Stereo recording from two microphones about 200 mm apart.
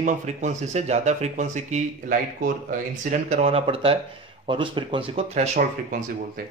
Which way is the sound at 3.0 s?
35° right (ahead or behind).